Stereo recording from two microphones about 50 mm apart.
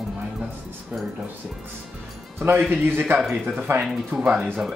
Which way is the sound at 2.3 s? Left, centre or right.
Right.